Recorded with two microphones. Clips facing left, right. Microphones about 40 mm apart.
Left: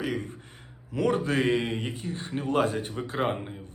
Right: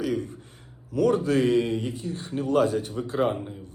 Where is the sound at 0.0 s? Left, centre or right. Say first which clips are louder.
Right 3 dB; left.